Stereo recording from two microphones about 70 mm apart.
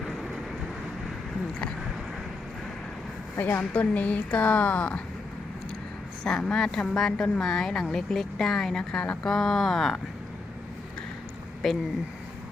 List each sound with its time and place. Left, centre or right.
3.3 s speech: left
6.2 s a woman's voice: centre
11.6 s speech: centre